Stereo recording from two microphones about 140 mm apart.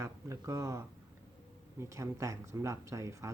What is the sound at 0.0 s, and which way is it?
Speech, 20° right (ahead or behind).